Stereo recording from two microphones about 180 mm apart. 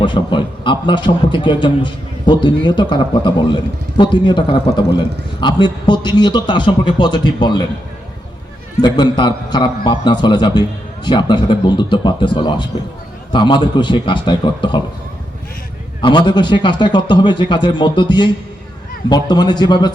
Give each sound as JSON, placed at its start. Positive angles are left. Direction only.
{"t": 0.0, "sound": "a man's voice", "side_deg": 25}
{"t": 8.8, "sound": "a man's voice", "side_deg": 25}
{"t": 16.0, "sound": "a man's voice", "side_deg": 25}